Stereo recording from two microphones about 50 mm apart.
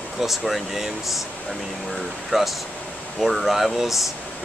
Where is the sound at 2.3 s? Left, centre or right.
Centre.